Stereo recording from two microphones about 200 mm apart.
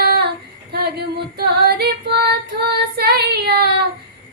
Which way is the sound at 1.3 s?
55° right (ahead or behind).